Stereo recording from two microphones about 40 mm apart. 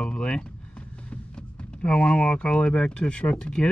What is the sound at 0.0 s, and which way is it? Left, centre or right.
Vehicle, left.